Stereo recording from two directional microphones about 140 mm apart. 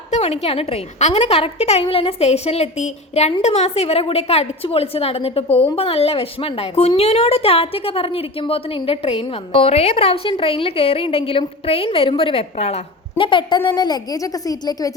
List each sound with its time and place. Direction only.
0.2 s a woman's voice: 45° left (ahead or behind); by 14.9 s 25° left (ahead or behind)